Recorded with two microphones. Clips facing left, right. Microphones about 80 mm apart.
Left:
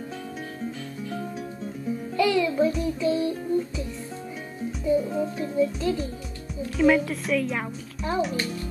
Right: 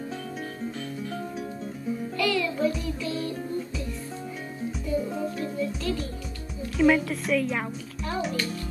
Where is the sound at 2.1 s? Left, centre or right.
Centre.